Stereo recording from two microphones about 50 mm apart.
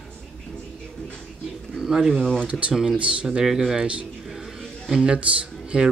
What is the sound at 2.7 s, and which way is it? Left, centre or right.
Speech, centre.